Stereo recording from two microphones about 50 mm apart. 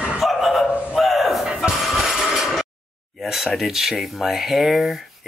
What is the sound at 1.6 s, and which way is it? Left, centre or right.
Music, centre.